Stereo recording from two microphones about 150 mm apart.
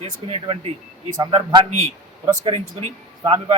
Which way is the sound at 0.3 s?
40° right (ahead or behind).